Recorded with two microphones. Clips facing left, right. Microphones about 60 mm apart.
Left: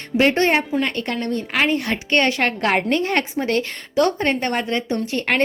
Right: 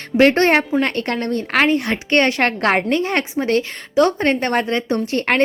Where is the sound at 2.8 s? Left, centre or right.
Right.